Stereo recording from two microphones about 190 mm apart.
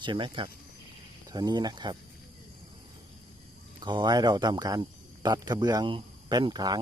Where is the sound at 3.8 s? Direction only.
25° right (ahead or behind).